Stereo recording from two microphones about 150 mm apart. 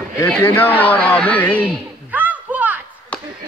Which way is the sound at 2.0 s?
10° right (ahead or behind).